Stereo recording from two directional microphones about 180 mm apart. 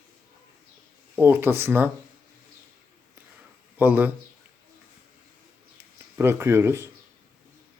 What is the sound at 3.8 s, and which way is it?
Speech, 10° right (ahead or behind).